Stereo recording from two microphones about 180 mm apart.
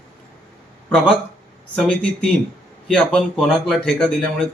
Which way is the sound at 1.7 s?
5° left (ahead or behind).